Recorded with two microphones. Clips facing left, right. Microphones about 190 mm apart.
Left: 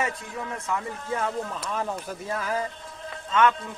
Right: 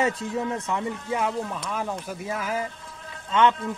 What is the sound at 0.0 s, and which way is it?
Speech, 25° right (ahead or behind).